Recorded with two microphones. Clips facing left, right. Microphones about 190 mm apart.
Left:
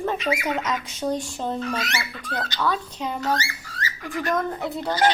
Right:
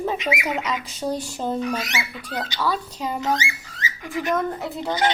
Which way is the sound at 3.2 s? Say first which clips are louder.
Right 1 dB; 15° right (ahead or behind).